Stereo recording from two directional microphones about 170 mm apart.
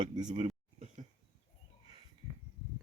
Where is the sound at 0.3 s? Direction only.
40° right (ahead or behind).